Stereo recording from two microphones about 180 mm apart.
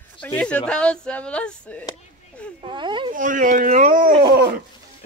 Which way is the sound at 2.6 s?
25° right (ahead or behind).